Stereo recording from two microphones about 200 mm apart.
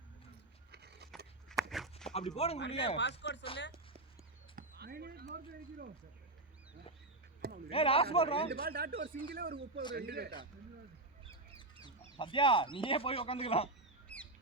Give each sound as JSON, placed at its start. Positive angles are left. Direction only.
{"t": 0.7, "sound": "a sound", "side_deg": -55}
{"t": 1.5, "sound": "walk", "side_deg": 0}
{"t": 2.1, "sound": "speech", "side_deg": 30}
{"t": 3.0, "sound": "speech", "side_deg": 60}
{"t": 4.5, "sound": "a sound", "side_deg": -50}
{"t": 7.7, "sound": "speech", "side_deg": 30}
{"t": 8.6, "sound": "speech", "side_deg": -50}
{"t": 12.1, "sound": "speech", "side_deg": 25}